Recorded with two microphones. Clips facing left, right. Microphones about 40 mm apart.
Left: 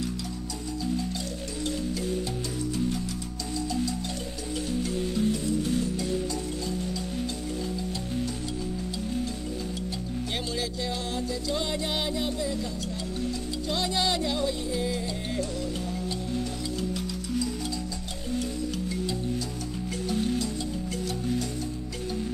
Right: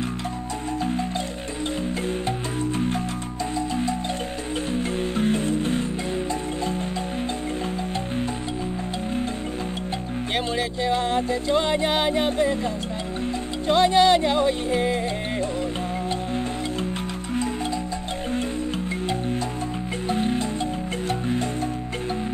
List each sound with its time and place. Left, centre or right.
4.7 s music: right
10.3 s music: right
13.7 s music: right
20.1 s music: right